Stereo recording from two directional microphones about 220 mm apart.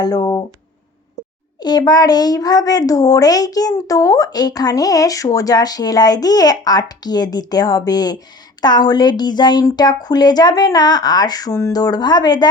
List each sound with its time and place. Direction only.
0.0 s a child's voice: 20° left (ahead or behind)
1.5 s a child's voice: 20° left (ahead or behind)